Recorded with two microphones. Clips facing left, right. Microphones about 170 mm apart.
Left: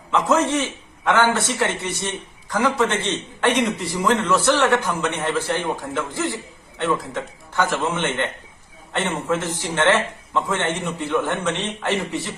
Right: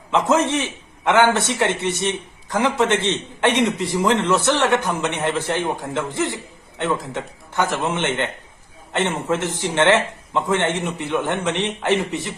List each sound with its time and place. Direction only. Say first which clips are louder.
0.1 s a man's voice: right 1 dB; 20° right (ahead or behind)